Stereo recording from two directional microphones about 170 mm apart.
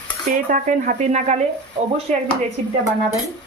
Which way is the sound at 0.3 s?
50° right (ahead or behind).